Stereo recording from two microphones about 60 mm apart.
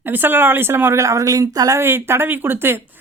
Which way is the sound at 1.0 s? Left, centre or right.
Right.